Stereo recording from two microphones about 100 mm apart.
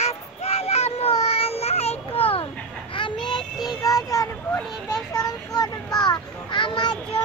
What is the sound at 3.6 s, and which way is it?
Child singing, 35° left (ahead or behind).